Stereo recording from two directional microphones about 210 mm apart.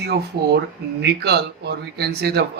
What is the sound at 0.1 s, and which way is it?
Speech, 50° right (ahead or behind).